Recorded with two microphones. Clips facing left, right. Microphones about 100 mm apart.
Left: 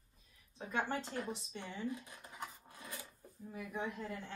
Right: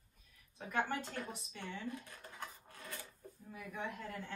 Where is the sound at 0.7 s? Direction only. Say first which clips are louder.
Even; 25° left (ahead or behind).